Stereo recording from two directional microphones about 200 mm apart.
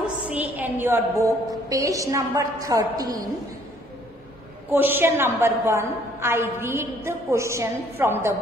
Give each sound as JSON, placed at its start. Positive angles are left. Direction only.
{"t": 0.3, "sound": "a woman's voice", "side_deg": -10}
{"t": 4.6, "sound": "a woman's voice", "side_deg": -10}